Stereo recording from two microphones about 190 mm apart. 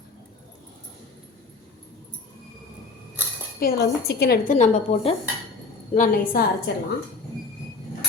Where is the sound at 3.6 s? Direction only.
55° left (ahead or behind).